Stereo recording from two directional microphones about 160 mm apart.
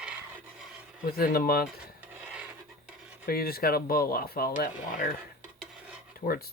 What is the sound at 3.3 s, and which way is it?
Speech, 70° left (ahead or behind).